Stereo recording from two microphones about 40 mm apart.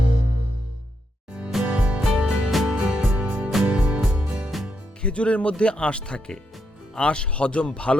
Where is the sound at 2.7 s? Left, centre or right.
Right.